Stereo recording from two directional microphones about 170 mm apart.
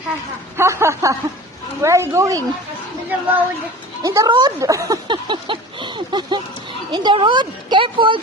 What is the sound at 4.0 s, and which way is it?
Speech, 20° right (ahead or behind).